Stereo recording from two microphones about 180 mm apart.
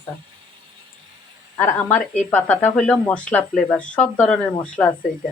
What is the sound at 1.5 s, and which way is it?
Speech, 10° left (ahead or behind).